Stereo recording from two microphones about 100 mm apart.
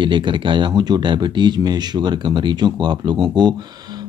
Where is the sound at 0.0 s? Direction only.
55° right (ahead or behind).